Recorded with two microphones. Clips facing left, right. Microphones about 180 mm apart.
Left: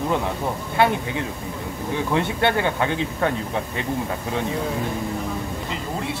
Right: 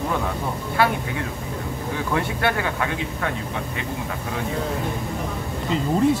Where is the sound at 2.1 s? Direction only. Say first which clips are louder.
Left 2 dB; 25° left (ahead or behind).